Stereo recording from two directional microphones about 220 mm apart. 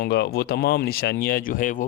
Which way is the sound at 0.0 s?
50° left (ahead or behind).